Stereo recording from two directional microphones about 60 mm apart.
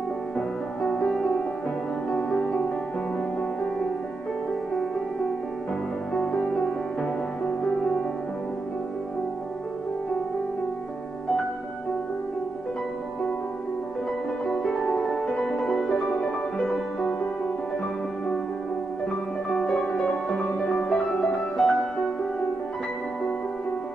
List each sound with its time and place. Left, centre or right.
0.8 s music: centre
6.1 s music: centre
14.4 s harp: centre
15.0 s music: centre
19.5 s music: centre